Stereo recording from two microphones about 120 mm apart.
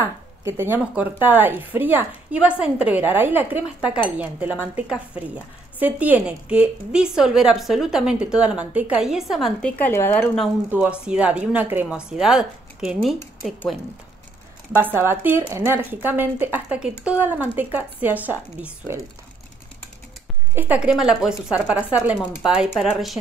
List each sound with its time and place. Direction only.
0.0 s a woman's voice: 20° right (ahead or behind); by 9.5 s 5° right (ahead or behind)
9.6 s speech: 10° left (ahead or behind)
10.7 s a woman's voice: 10° right (ahead or behind)
14.8 s a woman's voice: 20° right (ahead or behind)
20.5 s a woman's voice: 15° right (ahead or behind)